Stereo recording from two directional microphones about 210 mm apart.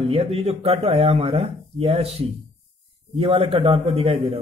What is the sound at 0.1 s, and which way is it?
A man's voice, 25° right (ahead or behind).